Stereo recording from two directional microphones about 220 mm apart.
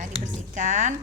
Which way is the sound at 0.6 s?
35° right (ahead or behind).